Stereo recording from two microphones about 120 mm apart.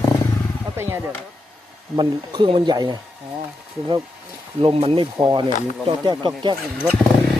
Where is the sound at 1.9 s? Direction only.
40° right (ahead or behind).